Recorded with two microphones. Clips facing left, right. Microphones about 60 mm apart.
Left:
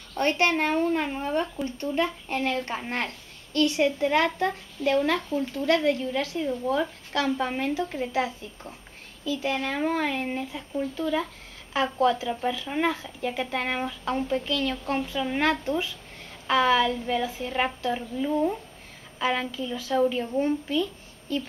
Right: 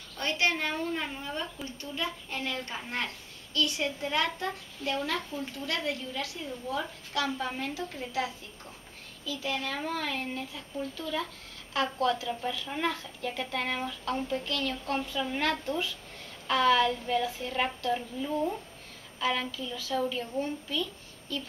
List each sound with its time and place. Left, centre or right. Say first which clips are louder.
0.1 s a child's voice: left 6 dB; left
3.5 s a child's voice: left 8 dB; left
15.4 s a woman's voice: left 6 dB; centre; by 20.8 s left